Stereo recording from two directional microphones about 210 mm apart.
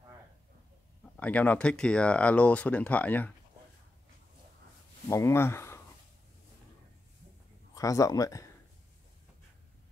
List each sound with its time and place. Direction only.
1.1 s speech: 5° left (ahead or behind)
5.1 s speech: 10° left (ahead or behind)
7.7 s speech: 15° left (ahead or behind)